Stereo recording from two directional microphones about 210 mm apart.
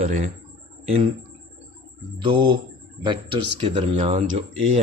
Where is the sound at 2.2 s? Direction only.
25° right (ahead or behind).